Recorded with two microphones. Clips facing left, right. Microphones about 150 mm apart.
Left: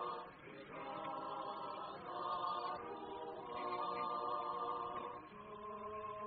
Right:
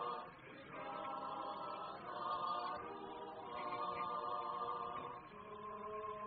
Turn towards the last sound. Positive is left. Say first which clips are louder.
# left 2 dB
turn(degrees=20)  # may be behind; listen again after turning